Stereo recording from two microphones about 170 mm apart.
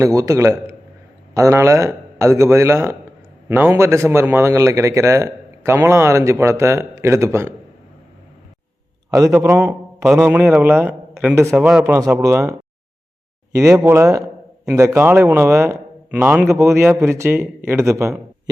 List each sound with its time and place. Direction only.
0.0 s a man's voice: 20° right (ahead or behind)
9.0 s a man's voice: 20° right (ahead or behind)
10.0 s a man's voice: 5° right (ahead or behind)
11.9 s a man's voice: 15° right (ahead or behind)